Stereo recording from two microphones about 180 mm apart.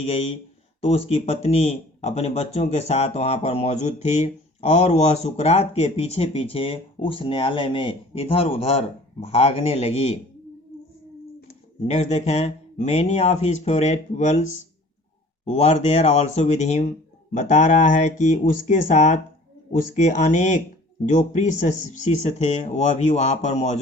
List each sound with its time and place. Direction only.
0.0 s speech: 30° left (ahead or behind)
11.9 s speech: 40° left (ahead or behind)
15.4 s speech: 40° left (ahead or behind)